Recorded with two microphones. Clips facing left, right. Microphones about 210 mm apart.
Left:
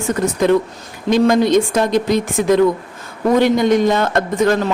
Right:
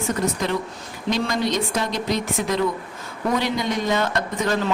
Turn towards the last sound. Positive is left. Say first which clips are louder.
# left 8 dB
turn(degrees=55)  # may be behind; listen again after turning